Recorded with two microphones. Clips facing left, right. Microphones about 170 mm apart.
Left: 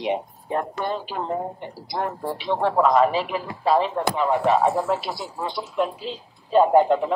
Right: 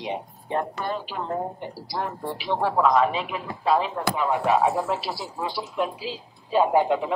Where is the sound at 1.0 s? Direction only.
45° left (ahead or behind).